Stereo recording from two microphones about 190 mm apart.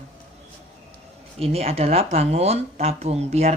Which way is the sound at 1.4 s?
30° right (ahead or behind).